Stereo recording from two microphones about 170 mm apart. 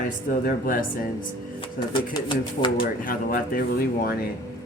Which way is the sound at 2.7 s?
60° left (ahead or behind).